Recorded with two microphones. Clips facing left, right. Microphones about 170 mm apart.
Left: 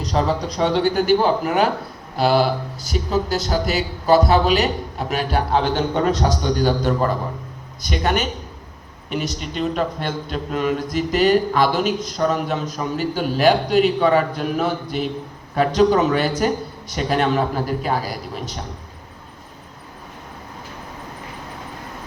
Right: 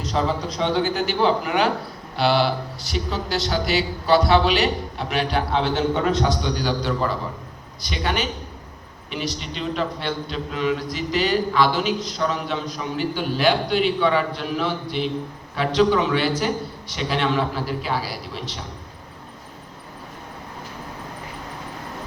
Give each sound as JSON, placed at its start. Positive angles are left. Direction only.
{"t": 0.0, "sound": "a man's voice", "side_deg": 40}
{"t": 0.9, "sound": "a man's voice", "side_deg": 50}